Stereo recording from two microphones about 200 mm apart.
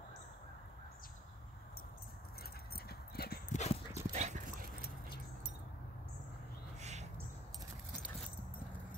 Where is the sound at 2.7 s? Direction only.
50° left (ahead or behind).